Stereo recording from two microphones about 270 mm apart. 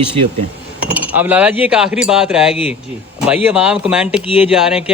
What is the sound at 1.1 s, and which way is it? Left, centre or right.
A man's voice, centre.